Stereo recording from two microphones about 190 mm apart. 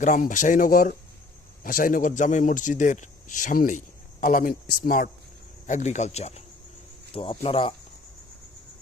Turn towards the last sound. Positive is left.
turn(degrees=30)  # may be behind; listen again after turning